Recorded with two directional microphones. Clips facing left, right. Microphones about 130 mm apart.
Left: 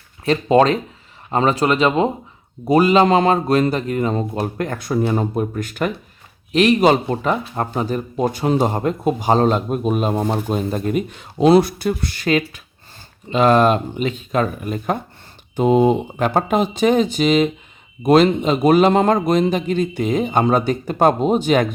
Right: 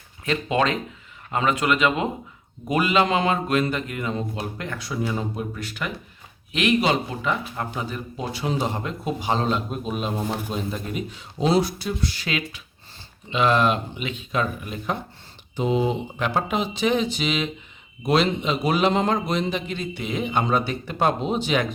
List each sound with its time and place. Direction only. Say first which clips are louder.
0.3 s a man's voice: left 8 dB; 35° left (ahead or behind)